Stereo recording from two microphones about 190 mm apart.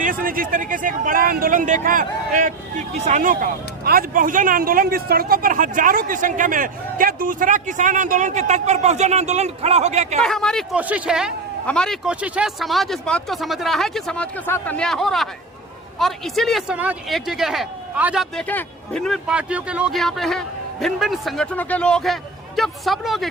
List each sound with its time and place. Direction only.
0.0 s speech: 45° right (ahead or behind)
10.2 s speech: 5° left (ahead or behind)